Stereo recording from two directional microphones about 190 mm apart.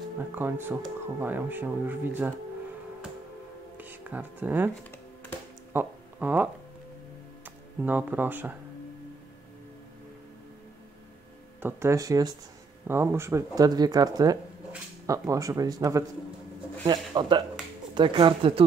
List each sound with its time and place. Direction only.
0.2 s speech: 10° right (ahead or behind)
3.7 s music: 10° right (ahead or behind)
5.7 s a sound: 10° right (ahead or behind)
7.4 s speech: 10° right (ahead or behind)
11.6 s speech: 15° right (ahead or behind)